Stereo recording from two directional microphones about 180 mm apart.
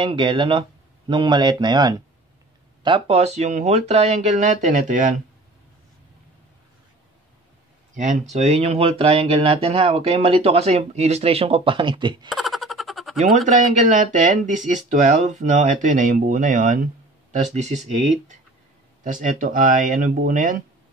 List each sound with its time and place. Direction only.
0.0 s speech: 25° right (ahead or behind)
2.8 s speech: 30° right (ahead or behind)
7.9 s speech: 40° right (ahead or behind); by 12.3 s 25° right (ahead or behind)
12.3 s a sound: centre (ahead or behind)
13.5 s speech: 40° right (ahead or behind)